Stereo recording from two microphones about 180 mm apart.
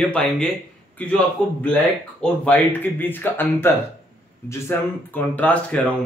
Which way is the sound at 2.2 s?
10° left (ahead or behind).